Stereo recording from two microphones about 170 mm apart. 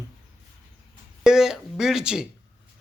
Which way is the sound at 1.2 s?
5° right (ahead or behind).